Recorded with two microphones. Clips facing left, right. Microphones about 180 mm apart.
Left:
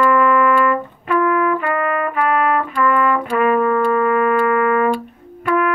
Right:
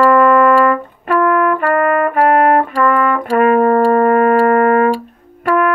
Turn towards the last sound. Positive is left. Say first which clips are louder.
# right 3 dB
turn(degrees=-55)  # may be behind; listen again after turning